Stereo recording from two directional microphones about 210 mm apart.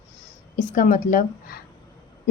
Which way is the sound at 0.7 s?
35° left (ahead or behind).